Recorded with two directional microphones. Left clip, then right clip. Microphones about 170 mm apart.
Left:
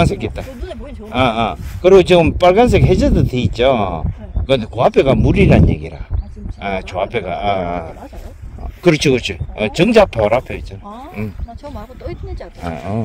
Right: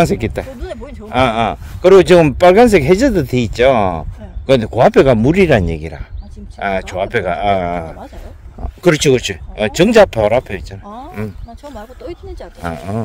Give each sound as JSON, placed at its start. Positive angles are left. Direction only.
{"t": 0.0, "sound": "a man's voice", "side_deg": -45}
{"t": 12.0, "sound": "speech", "side_deg": -75}
{"t": 12.7, "sound": "a man's voice", "side_deg": -40}